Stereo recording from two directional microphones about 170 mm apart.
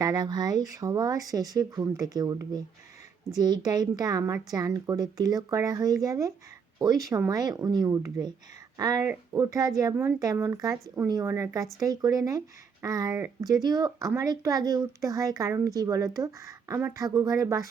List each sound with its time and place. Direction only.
0.0 s speech: 25° right (ahead or behind)